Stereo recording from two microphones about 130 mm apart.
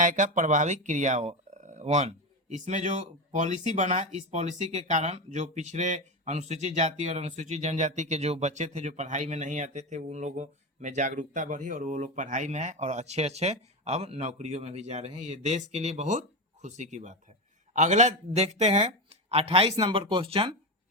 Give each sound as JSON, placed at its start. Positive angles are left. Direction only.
{"t": 0.0, "sound": "speech", "side_deg": -75}